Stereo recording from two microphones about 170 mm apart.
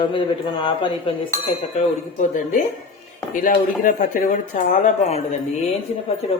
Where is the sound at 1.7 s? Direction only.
45° left (ahead or behind).